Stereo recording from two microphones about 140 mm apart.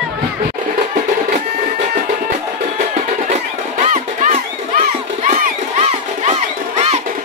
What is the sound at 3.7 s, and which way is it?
Music, 55° right (ahead or behind).